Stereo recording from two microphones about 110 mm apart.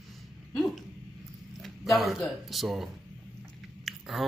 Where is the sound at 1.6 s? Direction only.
Centre (ahead or behind).